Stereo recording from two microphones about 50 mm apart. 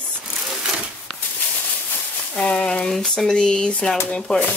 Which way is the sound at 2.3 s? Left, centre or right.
Centre.